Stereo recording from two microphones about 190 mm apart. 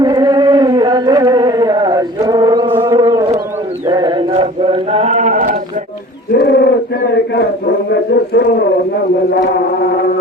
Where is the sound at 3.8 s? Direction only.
20° right (ahead or behind); by 5.6 s 45° right (ahead or behind).